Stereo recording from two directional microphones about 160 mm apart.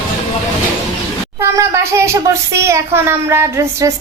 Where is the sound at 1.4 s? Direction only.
15° right (ahead or behind).